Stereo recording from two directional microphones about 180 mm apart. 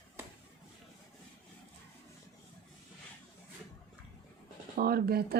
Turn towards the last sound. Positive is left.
turn(degrees=-60)  # may be behind; listen again after turning